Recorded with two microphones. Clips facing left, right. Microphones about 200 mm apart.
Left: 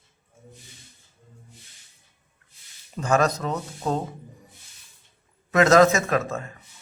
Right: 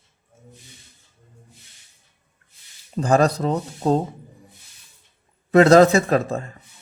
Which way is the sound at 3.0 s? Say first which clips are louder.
Right 4 dB; 35° right (ahead or behind).